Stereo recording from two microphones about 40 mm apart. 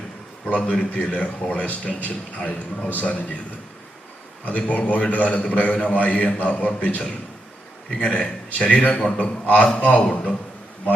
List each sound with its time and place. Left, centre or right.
0.4 s a man's voice: left
4.4 s a man's voice: left